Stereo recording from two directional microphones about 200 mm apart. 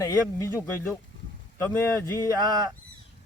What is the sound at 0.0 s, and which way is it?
Speech, 15° left (ahead or behind).